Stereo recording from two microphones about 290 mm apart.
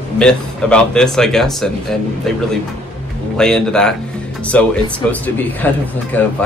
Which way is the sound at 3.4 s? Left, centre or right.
Centre.